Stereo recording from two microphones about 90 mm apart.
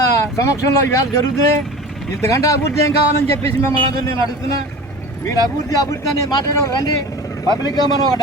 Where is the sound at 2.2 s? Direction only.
35° left (ahead or behind).